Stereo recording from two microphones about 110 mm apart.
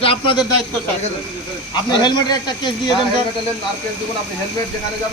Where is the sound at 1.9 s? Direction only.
40° left (ahead or behind).